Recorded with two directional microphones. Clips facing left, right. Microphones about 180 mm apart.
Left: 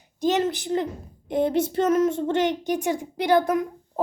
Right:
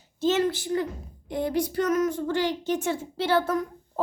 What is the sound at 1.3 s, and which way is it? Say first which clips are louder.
A woman's voice: left 4 dB; 20° left (ahead or behind).